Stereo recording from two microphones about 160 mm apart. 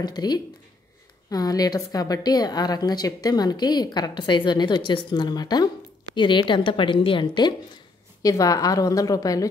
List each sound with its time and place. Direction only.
0.0 s a woman's voice: 25° left (ahead or behind)